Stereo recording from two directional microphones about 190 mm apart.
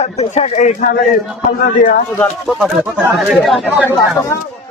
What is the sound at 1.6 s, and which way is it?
Speech, 50° left (ahead or behind).